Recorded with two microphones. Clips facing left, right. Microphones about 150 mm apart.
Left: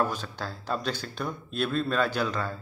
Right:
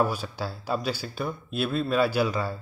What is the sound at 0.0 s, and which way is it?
A man's voice, 10° right (ahead or behind).